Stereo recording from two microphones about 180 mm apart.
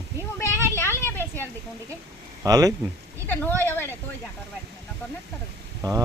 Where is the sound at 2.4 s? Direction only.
20° right (ahead or behind).